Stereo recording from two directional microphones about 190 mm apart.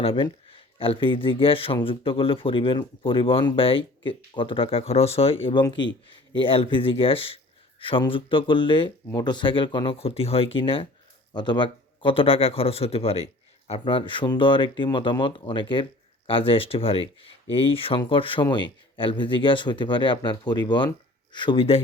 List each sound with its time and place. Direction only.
0.0 s speech: 30° left (ahead or behind)